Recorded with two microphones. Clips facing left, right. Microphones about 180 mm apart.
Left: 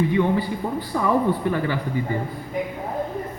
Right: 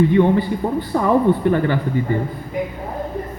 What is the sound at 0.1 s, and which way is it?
A man's voice, 55° right (ahead or behind).